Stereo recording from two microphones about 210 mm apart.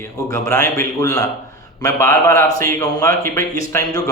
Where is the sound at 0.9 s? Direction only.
15° left (ahead or behind).